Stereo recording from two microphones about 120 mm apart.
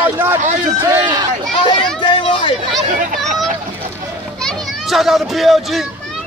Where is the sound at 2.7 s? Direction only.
Centre (ahead or behind).